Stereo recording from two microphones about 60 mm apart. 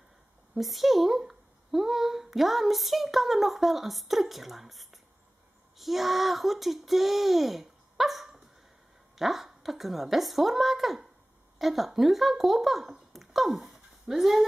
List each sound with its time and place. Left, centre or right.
0.6 s speech: centre